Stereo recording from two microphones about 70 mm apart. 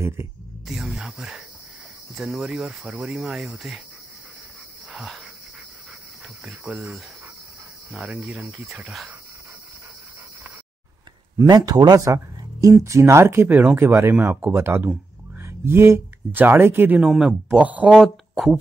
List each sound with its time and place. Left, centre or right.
0.7 s speech: centre
4.9 s dog: centre
7.9 s speech: centre
11.4 s speech: right
12.8 s speech: right
17.0 s speech: centre
17.6 s speech: right
17.9 s speech: centre